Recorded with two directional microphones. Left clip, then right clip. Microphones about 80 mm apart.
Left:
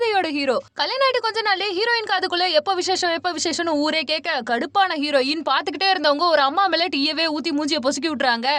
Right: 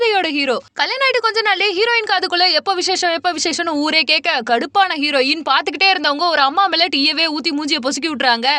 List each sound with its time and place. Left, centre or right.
0.0 s a woman's voice: centre
3.9 s a woman's voice: right